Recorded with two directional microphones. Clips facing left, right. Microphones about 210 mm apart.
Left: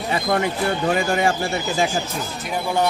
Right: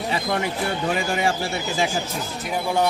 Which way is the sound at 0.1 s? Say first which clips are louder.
Left 5 dB; 50° left (ahead or behind).